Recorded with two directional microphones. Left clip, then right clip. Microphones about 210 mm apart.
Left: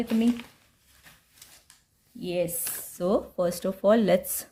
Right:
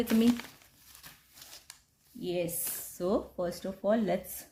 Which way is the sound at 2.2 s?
25° left (ahead or behind).